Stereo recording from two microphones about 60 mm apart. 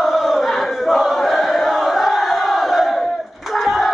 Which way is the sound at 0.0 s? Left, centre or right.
Centre.